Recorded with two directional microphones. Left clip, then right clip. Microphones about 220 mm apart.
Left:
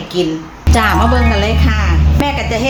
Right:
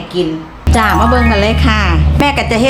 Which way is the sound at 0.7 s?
5° right (ahead or behind).